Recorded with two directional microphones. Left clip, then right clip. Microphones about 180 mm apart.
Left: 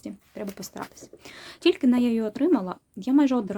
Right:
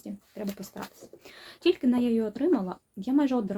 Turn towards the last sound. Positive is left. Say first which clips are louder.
# left 4 dB
turn(degrees=30)  # may be behind; listen again after turning